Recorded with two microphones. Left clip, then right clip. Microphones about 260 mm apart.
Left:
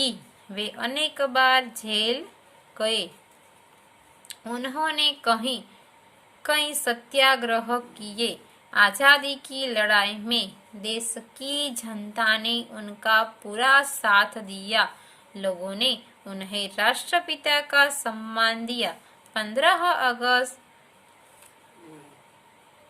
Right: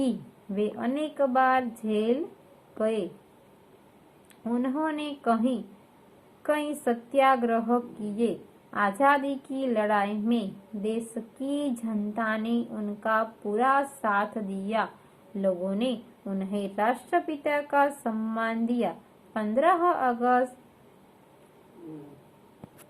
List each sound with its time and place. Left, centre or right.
0.5 s a woman's voice: left
4.4 s a woman's voice: left